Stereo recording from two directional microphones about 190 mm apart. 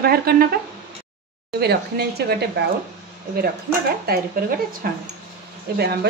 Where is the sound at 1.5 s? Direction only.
60° right (ahead or behind).